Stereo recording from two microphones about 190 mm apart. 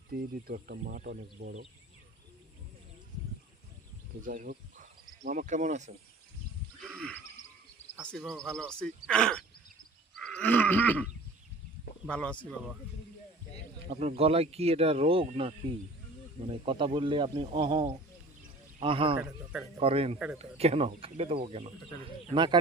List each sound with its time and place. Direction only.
0.1 s speech: 50° right (ahead or behind)
4.3 s speech: 45° right (ahead or behind)
8.0 s speech: centre (ahead or behind)
10.2 s a sound: 5° left (ahead or behind)
12.0 s speech: 5° left (ahead or behind)
13.9 s speech: 35° right (ahead or behind)
19.1 s a man's voice: 10° right (ahead or behind)
19.8 s speech: 30° right (ahead or behind)
20.1 s speech: 5° right (ahead or behind)
20.4 s speech: 35° right (ahead or behind)